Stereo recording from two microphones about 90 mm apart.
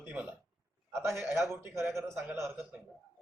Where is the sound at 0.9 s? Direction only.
30° right (ahead or behind).